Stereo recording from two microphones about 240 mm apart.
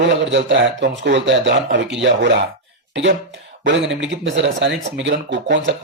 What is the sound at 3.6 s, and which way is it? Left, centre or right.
Speech, right.